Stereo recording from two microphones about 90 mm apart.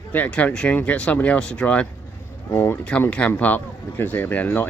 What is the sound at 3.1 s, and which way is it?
Speech, 15° left (ahead or behind).